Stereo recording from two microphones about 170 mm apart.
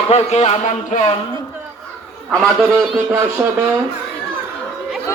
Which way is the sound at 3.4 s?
10° right (ahead or behind).